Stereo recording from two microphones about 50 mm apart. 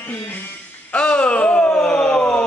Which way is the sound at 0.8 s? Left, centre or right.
Left.